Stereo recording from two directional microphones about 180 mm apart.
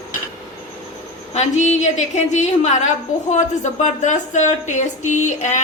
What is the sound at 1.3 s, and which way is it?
A woman's voice, 40° left (ahead or behind).